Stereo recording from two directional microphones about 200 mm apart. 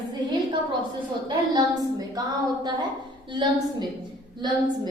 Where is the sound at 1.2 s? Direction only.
20° right (ahead or behind).